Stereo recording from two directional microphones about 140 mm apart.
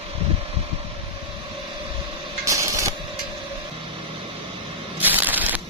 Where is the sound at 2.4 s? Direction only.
20° right (ahead or behind).